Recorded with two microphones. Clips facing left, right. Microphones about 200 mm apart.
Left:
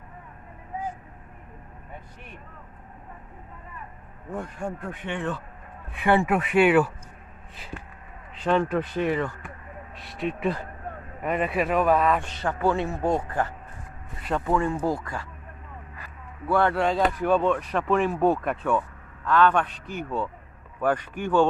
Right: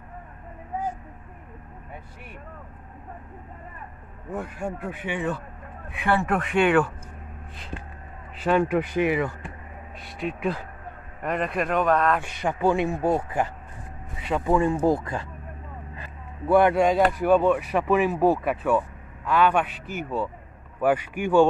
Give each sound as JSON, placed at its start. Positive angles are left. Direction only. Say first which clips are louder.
{"t": 4.3, "sound": "a man's voice", "louder": "right 1 dB", "side_deg": -5}
{"t": 6.2, "sound": "speech", "louder": "left 2 dB", "side_deg": 5}
{"t": 8.4, "sound": "a man's voice", "louder": "right 2 dB", "side_deg": -5}
{"t": 9.9, "sound": "speech", "louder": "left 1 dB", "side_deg": 0}
{"t": 12.2, "sound": "a man's voice", "louder": "right 1 dB", "side_deg": -15}